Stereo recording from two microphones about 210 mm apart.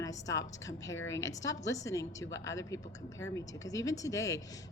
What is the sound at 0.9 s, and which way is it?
Speech, 65° left (ahead or behind).